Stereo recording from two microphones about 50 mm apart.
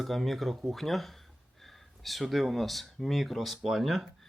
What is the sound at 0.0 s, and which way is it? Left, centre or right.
Speech, centre.